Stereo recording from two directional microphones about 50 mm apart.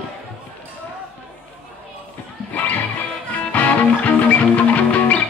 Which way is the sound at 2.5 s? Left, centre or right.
Left.